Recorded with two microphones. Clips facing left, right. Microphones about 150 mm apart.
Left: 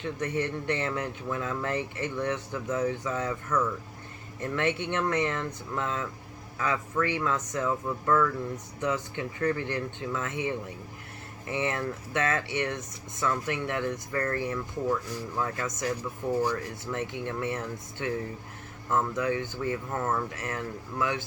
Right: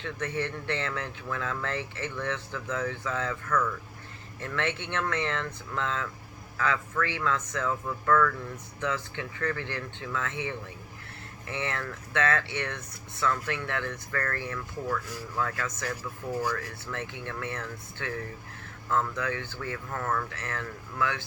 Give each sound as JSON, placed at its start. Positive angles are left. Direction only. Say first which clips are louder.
{"t": 0.0, "sound": "speech", "louder": "left 2 dB", "side_deg": 15}
{"t": 11.4, "sound": "speech", "louder": "left 4 dB", "side_deg": 20}